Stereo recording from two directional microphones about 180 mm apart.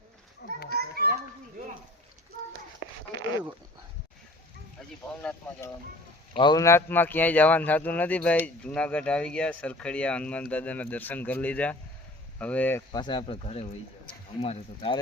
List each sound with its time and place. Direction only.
0.7 s children playing: 60° right (ahead or behind)
5.0 s a man's voice: 10° left (ahead or behind)
6.3 s a man's voice: 25° left (ahead or behind)
12.9 s speech: 25° left (ahead or behind)